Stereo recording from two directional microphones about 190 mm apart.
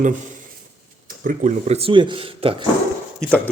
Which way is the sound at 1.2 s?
45° right (ahead or behind).